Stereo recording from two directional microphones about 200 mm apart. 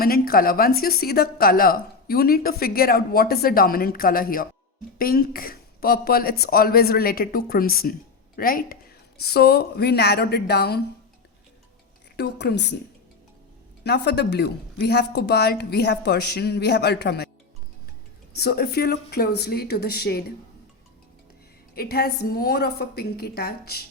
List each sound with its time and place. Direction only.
0.0 s a woman's voice: 45° left (ahead or behind)
12.1 s speech: 55° left (ahead or behind)
13.8 s speech: 55° left (ahead or behind)
18.3 s a woman's voice: 50° left (ahead or behind)
21.8 s a woman's voice: 50° left (ahead or behind)